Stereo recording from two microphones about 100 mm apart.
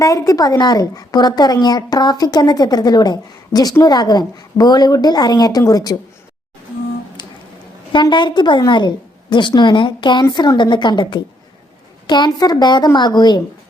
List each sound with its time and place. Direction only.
0.0 s a woman's voice: 40° left (ahead or behind)
7.2 s music: 50° left (ahead or behind)
8.1 s a woman's voice: 50° left (ahead or behind)